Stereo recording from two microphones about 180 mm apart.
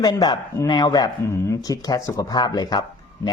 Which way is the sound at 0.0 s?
25° left (ahead or behind).